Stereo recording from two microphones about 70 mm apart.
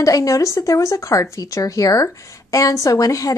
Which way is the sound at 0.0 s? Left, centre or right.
Left.